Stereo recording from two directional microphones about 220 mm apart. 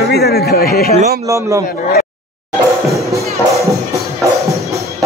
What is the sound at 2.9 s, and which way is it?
Music, 15° right (ahead or behind).